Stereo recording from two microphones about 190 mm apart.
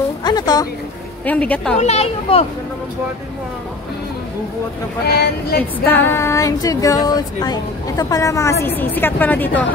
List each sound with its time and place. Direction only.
0.2 s speech: 20° left (ahead or behind)
1.2 s female singing: 10° left (ahead or behind)
1.8 s speech: 35° left (ahead or behind)
5.0 s speech: 55° left (ahead or behind)
5.6 s female singing: 10° left (ahead or behind)